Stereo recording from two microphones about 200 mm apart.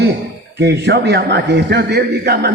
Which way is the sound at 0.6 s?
55° right (ahead or behind).